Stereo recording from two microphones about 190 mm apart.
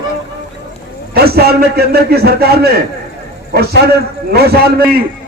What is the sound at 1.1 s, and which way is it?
A man's voice, 55° right (ahead or behind).